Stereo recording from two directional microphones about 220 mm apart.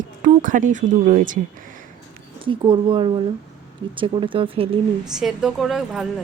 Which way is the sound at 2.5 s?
25° right (ahead or behind).